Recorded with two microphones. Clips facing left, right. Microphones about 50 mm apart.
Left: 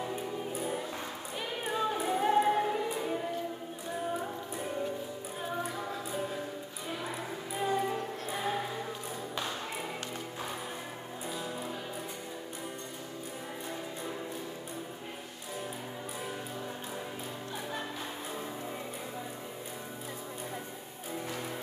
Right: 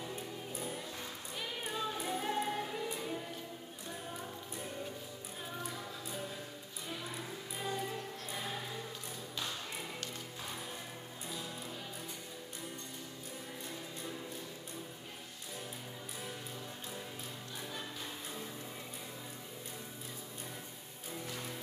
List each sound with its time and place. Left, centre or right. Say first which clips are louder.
0.0 s music: left 8 dB; left
7.5 s music: left 8 dB; left